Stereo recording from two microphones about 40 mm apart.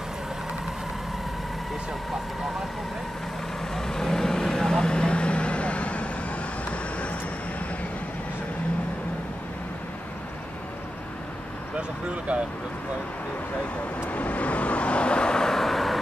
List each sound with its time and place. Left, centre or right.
3.7 s vehicle: centre; by 6.0 s left
14.1 s vehicle: left; by 16.0 s centre